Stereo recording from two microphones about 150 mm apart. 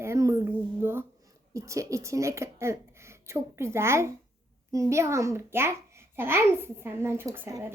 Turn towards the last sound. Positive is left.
turn(degrees=-15)  # may be behind; listen again after turning